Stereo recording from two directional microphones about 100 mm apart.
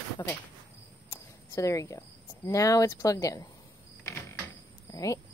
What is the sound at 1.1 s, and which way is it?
Speech, 30° left (ahead or behind).